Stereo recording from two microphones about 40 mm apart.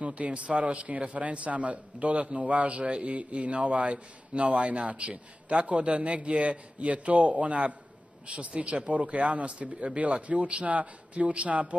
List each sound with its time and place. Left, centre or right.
0.0 s a man's voice: right